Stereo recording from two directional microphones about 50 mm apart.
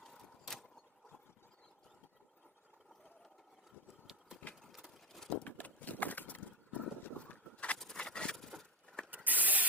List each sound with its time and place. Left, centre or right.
0.0 s a sound: centre
4.7 s horse: centre
5.4 s horse: left
7.9 s vehicle: centre
9.0 s mechanisms: right